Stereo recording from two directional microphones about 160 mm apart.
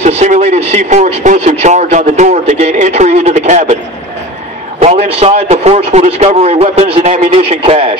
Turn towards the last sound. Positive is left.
turn(degrees=-40)  # may be behind; listen again after turning